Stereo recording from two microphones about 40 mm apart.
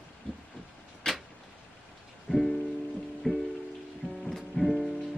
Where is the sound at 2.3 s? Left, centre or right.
Left.